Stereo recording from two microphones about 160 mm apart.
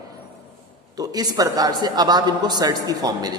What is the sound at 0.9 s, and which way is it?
A man's voice, 25° right (ahead or behind).